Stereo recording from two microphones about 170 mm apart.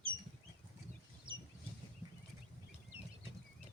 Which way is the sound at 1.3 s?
30° right (ahead or behind).